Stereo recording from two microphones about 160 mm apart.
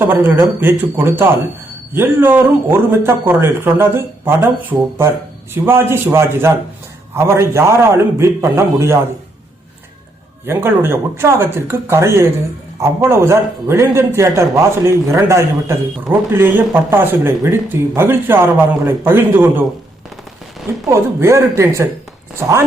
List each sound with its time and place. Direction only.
0.0 s a man's voice: 15° right (ahead or behind)
10.4 s a man's voice: 15° right (ahead or behind)
20.7 s a man's voice: 15° right (ahead or behind)